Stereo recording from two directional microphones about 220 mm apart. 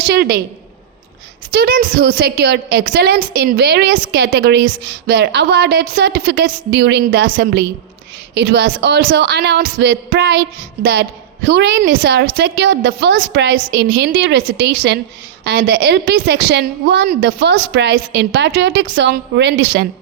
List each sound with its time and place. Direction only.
0.0 s a woman's voice: 45° right (ahead or behind)
1.5 s a woman's voice: 40° right (ahead or behind)
11.4 s a woman's voice: 50° right (ahead or behind)